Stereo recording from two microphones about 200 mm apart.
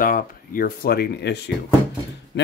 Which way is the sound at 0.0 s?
45° left (ahead or behind).